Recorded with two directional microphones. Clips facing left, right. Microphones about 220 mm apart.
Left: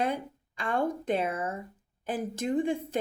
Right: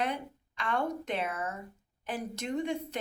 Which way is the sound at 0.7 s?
50° left (ahead or behind).